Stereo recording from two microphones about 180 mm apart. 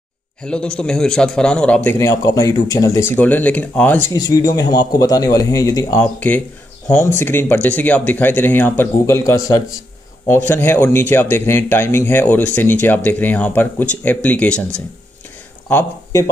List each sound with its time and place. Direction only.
0.4 s a man's voice: 5° left (ahead or behind)
1.9 s speech: 15° left (ahead or behind)
6.1 s speech: 10° left (ahead or behind)
15.7 s speech: 20° left (ahead or behind)